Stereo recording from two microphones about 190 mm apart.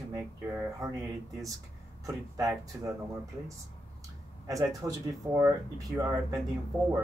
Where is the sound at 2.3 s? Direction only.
20° right (ahead or behind).